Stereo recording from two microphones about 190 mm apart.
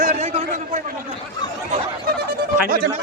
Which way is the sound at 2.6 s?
55° right (ahead or behind).